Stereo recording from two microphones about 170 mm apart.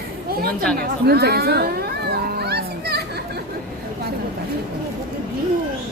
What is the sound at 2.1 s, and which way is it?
Children playing, 70° right (ahead or behind).